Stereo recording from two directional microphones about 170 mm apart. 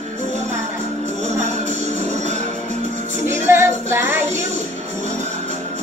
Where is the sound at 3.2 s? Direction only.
15° right (ahead or behind).